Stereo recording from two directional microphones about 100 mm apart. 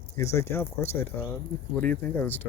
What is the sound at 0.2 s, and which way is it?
Speech, 25° left (ahead or behind).